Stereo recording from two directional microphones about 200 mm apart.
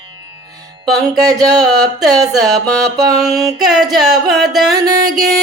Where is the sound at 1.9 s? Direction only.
Centre (ahead or behind).